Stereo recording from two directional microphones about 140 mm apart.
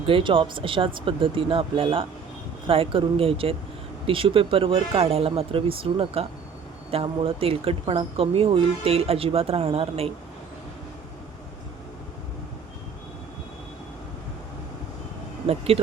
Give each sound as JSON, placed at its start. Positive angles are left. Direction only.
{"t": 0.0, "sound": "speech", "side_deg": -40}
{"t": 15.4, "sound": "speech", "side_deg": -45}